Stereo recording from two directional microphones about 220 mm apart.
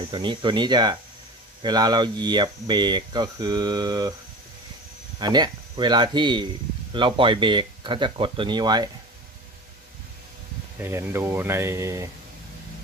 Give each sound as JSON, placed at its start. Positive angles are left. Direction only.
{"t": 0.1, "sound": "speech", "side_deg": -20}
{"t": 5.2, "sound": "speech", "side_deg": -20}
{"t": 10.8, "sound": "speech", "side_deg": -10}